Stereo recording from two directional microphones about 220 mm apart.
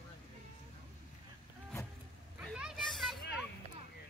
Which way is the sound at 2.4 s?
Centre (ahead or behind).